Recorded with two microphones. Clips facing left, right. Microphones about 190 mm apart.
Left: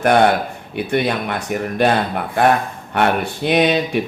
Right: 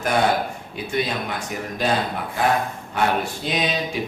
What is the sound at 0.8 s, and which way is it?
Speech, 65° left (ahead or behind).